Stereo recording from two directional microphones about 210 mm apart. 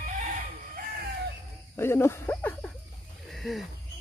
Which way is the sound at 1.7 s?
10° left (ahead or behind).